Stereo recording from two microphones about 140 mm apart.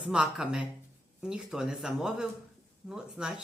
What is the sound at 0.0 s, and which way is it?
Speech, 5° right (ahead or behind).